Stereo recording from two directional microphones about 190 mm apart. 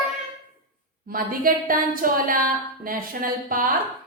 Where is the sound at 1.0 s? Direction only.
50° right (ahead or behind).